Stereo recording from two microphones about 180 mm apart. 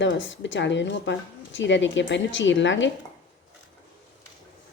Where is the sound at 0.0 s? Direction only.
90° left.